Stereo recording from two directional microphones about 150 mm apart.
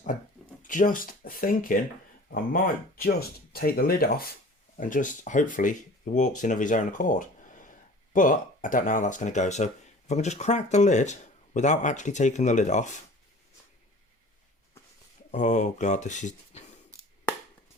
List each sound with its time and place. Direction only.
0.6 s speech: 60° left (ahead or behind)
3.0 s speech: 90° left
4.8 s a man's voice: 60° left (ahead or behind)
15.3 s speech: 55° left (ahead or behind)